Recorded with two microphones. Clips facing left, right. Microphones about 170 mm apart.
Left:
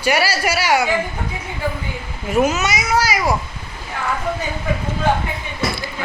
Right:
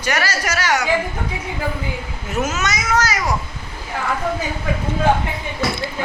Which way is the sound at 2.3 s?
10° left (ahead or behind).